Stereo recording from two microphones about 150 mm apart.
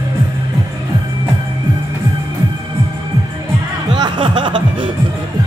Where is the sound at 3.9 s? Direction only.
30° right (ahead or behind).